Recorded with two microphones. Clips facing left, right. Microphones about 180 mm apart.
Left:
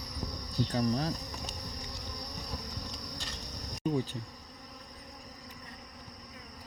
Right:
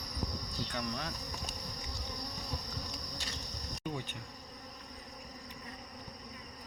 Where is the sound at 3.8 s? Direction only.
35° left (ahead or behind).